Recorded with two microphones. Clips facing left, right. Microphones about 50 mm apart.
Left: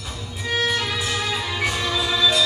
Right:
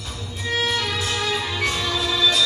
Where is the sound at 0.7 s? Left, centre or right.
Centre.